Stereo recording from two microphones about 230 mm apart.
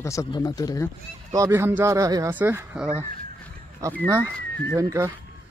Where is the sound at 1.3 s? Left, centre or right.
Centre.